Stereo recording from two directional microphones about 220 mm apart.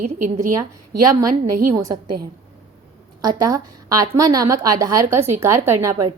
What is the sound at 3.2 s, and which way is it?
A woman's voice, 15° right (ahead or behind).